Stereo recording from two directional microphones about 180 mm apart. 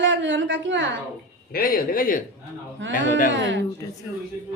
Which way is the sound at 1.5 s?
55° left (ahead or behind).